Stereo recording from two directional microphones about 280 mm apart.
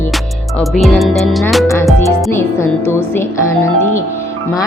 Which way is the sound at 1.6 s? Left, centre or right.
Centre.